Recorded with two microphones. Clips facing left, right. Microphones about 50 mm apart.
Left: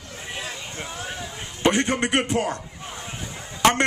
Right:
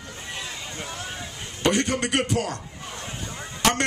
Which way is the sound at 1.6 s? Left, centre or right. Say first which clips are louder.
Left 2 dB; left.